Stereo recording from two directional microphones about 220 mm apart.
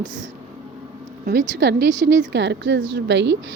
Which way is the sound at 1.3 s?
50° right (ahead or behind).